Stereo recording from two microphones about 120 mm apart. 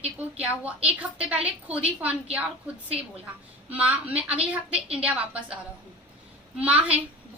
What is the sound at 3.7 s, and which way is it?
A woman's voice, 10° right (ahead or behind).